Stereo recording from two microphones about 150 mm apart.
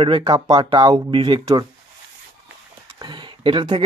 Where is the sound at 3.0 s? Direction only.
30° right (ahead or behind).